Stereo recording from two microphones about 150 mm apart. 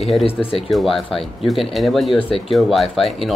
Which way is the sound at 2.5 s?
Centre (ahead or behind).